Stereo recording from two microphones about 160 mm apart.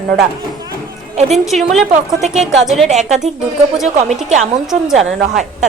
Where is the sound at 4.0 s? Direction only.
45° right (ahead or behind).